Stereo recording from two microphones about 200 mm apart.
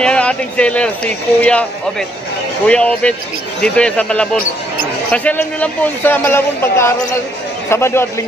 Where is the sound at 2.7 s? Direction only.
5° left (ahead or behind).